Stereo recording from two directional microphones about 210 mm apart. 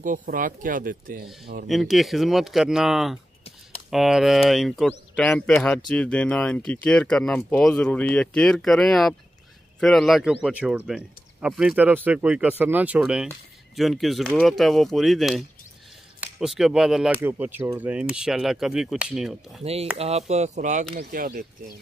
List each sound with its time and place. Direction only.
0.0 s speech: 40° right (ahead or behind)
1.7 s speech: centre (ahead or behind)
19.6 s speech: 30° right (ahead or behind); by 21.7 s 45° right (ahead or behind)